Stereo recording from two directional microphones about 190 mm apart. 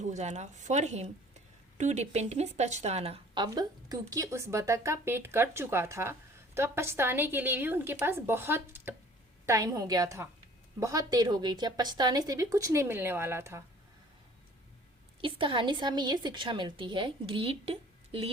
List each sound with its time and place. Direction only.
0.0 s a woman's voice: 40° right (ahead or behind); by 13.6 s 15° right (ahead or behind)
15.2 s a woman's voice: 25° right (ahead or behind)